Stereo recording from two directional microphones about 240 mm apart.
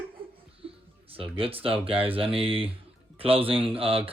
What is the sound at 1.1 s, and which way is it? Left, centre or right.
Speech, right.